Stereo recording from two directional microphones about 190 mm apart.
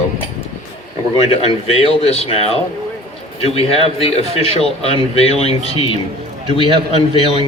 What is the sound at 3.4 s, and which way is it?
Speech, 30° left (ahead or behind).